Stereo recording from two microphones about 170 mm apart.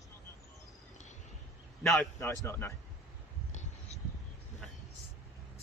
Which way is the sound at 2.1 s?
20° left (ahead or behind).